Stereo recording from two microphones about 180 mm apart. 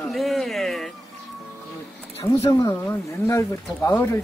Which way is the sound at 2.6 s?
15° left (ahead or behind).